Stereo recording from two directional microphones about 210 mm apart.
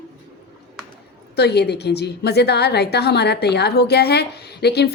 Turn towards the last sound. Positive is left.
turn(degrees=50)  # may be behind; listen again after turning